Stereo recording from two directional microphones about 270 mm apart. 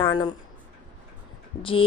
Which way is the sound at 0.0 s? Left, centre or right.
Centre.